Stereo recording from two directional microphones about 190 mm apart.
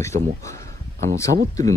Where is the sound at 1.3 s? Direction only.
60° right (ahead or behind).